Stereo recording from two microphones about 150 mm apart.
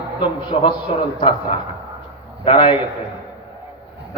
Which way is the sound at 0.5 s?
45° left (ahead or behind).